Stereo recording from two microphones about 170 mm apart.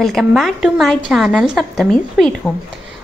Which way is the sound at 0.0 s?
Centre (ahead or behind).